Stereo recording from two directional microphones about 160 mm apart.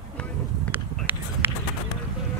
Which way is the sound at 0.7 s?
10° right (ahead or behind).